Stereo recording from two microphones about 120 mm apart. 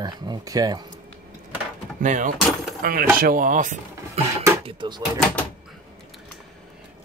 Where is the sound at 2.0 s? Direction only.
90° right.